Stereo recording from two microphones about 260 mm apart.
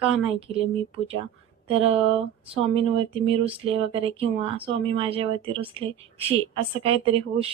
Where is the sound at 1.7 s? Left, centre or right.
Right.